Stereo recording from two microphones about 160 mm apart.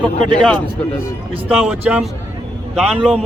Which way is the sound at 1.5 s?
5° right (ahead or behind).